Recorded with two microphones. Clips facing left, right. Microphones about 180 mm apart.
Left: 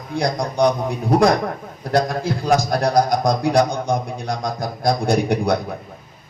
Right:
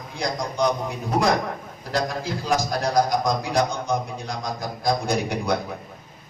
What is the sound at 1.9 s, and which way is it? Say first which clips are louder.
A man's voice: left 6 dB; 55° left (ahead or behind).